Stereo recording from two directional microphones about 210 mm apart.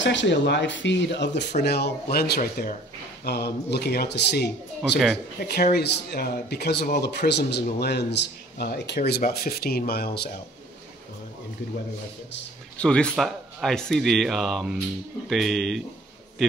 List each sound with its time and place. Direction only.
0.0 s speech: 60° left (ahead or behind)
12.7 s speech: 5° left (ahead or behind)